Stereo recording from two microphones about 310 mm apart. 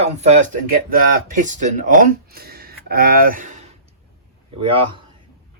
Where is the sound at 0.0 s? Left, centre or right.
Right.